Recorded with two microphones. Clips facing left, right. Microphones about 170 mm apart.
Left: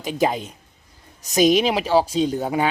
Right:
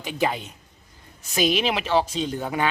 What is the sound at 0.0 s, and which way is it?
Speech, 40° left (ahead or behind).